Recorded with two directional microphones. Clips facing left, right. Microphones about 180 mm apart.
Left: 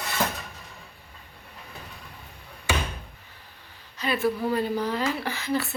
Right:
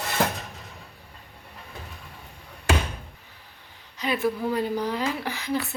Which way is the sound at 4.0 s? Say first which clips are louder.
Even; 15° right (ahead or behind).